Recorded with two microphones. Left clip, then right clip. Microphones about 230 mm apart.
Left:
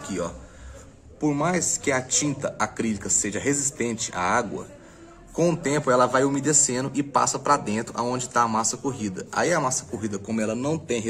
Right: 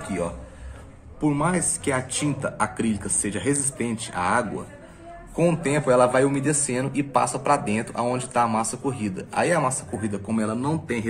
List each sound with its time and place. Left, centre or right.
1.3 s speech: centre
5.5 s speech: centre
10.7 s speech: left